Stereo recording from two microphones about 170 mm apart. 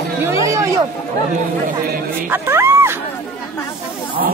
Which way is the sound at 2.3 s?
15° right (ahead or behind).